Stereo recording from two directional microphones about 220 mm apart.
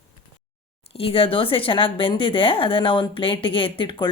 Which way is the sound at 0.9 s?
25° left (ahead or behind).